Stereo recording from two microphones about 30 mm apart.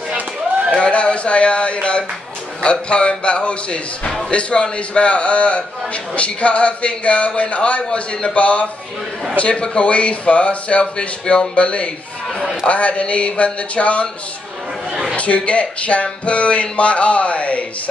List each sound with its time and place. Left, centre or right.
0.7 s a man's voice: left
8.4 s speech: left
15.1 s speech: left